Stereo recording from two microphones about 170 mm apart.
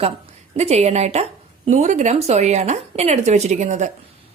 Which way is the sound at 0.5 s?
40° right (ahead or behind).